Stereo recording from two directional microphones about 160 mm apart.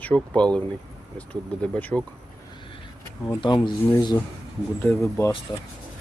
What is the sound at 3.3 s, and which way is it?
Speech, 30° left (ahead or behind).